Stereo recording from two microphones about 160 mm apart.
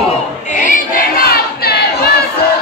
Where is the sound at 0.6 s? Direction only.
60° left (ahead or behind); by 2.1 s 75° left (ahead or behind).